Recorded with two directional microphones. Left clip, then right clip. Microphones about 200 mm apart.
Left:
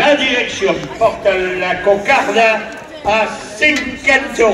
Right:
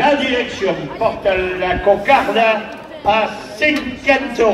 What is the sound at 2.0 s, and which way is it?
A man's voice, 15° left (ahead or behind).